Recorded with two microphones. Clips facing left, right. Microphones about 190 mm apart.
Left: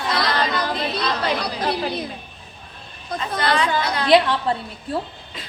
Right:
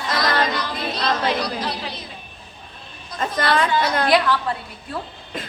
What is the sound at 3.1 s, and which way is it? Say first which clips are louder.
Chatter: right 1 dB; 50° right (ahead or behind).